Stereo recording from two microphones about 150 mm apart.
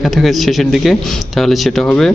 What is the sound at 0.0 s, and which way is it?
Speech, centre (ahead or behind).